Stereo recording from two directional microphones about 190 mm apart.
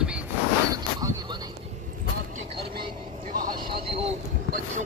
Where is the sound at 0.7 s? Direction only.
20° right (ahead or behind).